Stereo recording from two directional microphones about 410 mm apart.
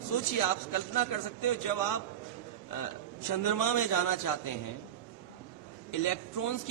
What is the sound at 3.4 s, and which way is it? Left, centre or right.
A man's voice, left.